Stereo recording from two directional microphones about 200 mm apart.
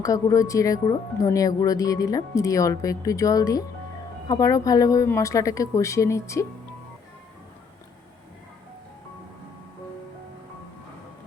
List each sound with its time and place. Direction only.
0.0 s speech: 15° left (ahead or behind)